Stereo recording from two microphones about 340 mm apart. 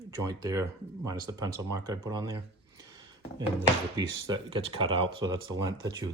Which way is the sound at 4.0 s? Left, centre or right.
Centre.